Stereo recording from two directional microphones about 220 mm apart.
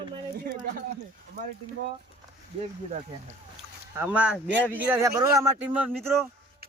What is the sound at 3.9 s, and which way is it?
Speech, 5° right (ahead or behind).